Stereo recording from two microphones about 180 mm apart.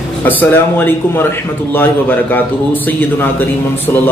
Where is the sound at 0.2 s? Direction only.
10° left (ahead or behind).